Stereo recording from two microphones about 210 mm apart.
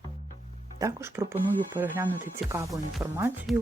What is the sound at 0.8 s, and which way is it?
Speech, 15° right (ahead or behind).